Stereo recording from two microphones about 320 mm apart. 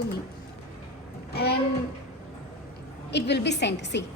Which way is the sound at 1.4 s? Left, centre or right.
Left.